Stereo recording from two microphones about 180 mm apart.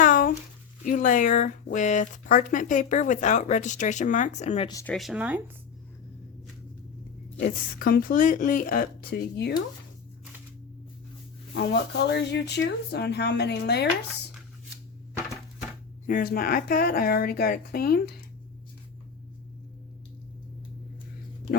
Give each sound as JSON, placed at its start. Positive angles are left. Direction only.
{"t": 0.0, "sound": "a sound", "side_deg": 50}
{"t": 0.9, "sound": "speech", "side_deg": 45}
{"t": 4.9, "sound": "speech", "side_deg": 0}
{"t": 7.4, "sound": "speech", "side_deg": 50}
{"t": 11.5, "sound": "speech", "side_deg": 65}
{"t": 16.0, "sound": "a woman's voice", "side_deg": 50}